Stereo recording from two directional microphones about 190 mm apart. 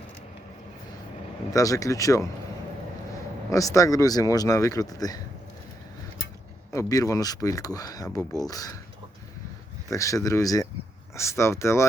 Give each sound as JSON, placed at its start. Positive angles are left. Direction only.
{"t": 1.5, "sound": "speech", "side_deg": 20}
{"t": 3.5, "sound": "speech", "side_deg": 15}
{"t": 6.7, "sound": "speech", "side_deg": 20}
{"t": 9.9, "sound": "speech", "side_deg": 15}